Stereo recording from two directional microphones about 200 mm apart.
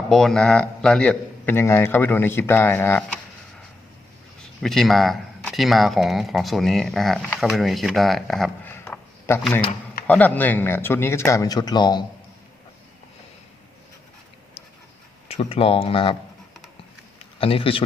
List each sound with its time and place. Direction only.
0.1 s a man's voice: centre (ahead or behind)
4.6 s a man's voice: centre (ahead or behind); by 12.0 s 20° left (ahead or behind)
15.3 s speech: 30° left (ahead or behind)
17.2 s speech: 30° left (ahead or behind)